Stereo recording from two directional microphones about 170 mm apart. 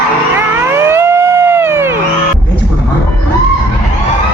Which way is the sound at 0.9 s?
15° right (ahead or behind).